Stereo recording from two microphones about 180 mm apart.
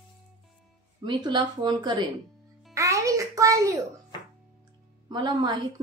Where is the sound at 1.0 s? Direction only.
25° right (ahead or behind).